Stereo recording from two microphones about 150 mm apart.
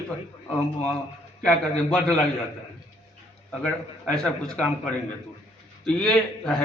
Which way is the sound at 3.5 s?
5° left (ahead or behind).